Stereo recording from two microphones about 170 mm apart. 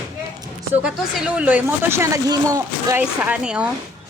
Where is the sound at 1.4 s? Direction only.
10° right (ahead or behind).